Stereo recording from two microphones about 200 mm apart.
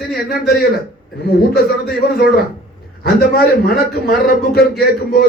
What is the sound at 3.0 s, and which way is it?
A man's voice, 50° left (ahead or behind).